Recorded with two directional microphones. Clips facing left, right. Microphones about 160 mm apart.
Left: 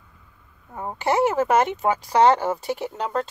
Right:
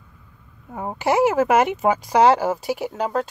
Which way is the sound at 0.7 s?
10° right (ahead or behind).